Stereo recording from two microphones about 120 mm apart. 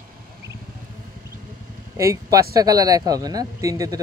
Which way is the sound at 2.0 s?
25° right (ahead or behind).